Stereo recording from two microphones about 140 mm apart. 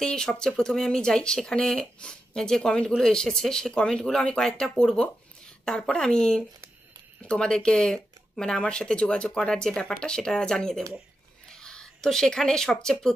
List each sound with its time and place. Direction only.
0.0 s speech: 5° left (ahead or behind)